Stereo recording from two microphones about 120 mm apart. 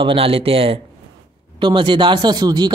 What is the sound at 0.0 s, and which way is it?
Speech, 50° right (ahead or behind).